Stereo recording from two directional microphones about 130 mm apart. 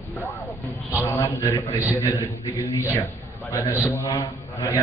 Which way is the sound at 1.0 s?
20° left (ahead or behind).